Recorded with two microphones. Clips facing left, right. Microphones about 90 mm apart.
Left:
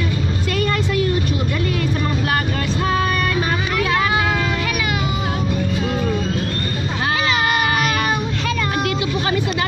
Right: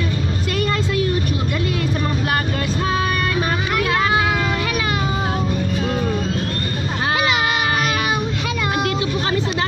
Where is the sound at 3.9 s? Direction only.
25° right (ahead or behind).